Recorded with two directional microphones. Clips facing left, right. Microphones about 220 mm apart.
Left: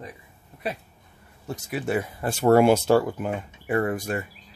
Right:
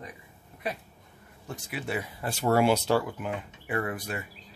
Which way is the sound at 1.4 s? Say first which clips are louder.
Left 6 dB; 40° left (ahead or behind).